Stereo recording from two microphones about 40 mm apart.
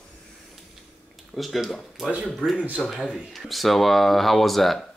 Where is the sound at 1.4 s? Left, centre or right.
Centre.